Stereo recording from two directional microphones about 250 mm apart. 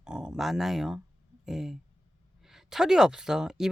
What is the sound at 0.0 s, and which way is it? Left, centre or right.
Speech, centre.